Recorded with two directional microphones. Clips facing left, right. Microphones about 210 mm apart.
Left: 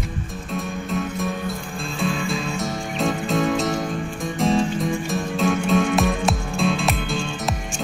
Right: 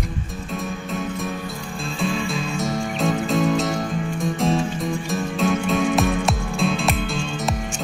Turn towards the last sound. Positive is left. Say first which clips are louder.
# even
turn(degrees=0)  # may be behind; listen again after turning